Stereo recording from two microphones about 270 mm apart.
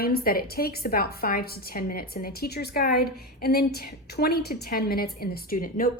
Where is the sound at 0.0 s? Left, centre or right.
Left.